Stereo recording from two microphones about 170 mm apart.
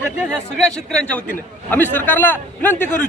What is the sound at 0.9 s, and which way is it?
A man's voice, 10° left (ahead or behind).